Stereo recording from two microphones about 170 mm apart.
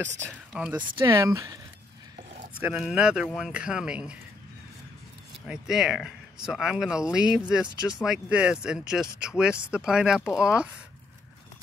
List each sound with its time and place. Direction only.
0.3 s speech: 5° right (ahead or behind)
0.9 s speech: 20° right (ahead or behind)
2.6 s speech: 5° right (ahead or behind)
5.5 s speech: centre (ahead or behind)